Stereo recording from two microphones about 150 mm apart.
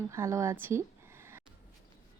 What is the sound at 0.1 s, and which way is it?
Speech, 20° right (ahead or behind).